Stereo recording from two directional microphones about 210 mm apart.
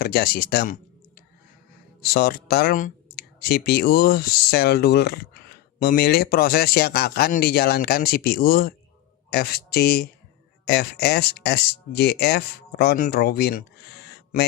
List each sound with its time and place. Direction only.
0.0 s speech: 45° left (ahead or behind)